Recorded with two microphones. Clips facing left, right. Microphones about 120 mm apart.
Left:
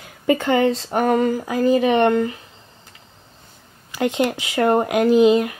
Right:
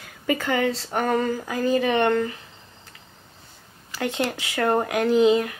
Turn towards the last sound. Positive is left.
turn(degrees=10)  # may be behind; listen again after turning